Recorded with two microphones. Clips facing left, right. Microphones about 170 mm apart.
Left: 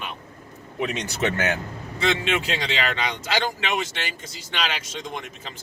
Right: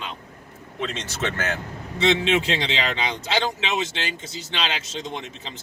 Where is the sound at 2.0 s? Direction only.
25° right (ahead or behind).